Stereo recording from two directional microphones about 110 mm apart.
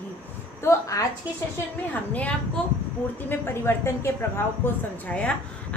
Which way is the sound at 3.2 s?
20° left (ahead or behind).